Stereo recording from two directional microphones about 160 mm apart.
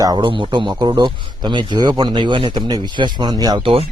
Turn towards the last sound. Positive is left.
turn(degrees=-35)  # may be behind; listen again after turning